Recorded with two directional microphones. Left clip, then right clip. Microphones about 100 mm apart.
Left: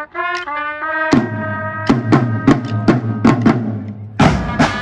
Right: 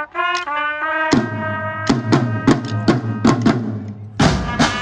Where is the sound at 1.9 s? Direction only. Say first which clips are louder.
Left 4 dB; 5° right (ahead or behind).